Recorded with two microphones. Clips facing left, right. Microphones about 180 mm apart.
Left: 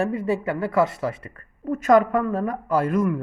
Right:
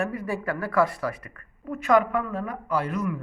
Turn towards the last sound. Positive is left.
turn(degrees=50)  # may be behind; listen again after turning